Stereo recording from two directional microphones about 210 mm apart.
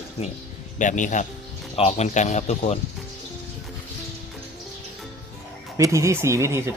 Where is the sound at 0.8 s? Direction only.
35° left (ahead or behind).